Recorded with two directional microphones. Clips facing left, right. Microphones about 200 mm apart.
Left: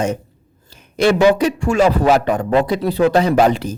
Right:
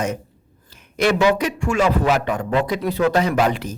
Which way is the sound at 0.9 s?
30° left (ahead or behind).